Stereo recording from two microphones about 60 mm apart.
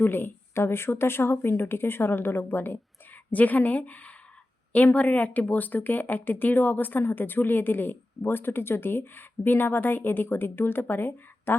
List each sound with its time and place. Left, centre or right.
0.0 s speech: left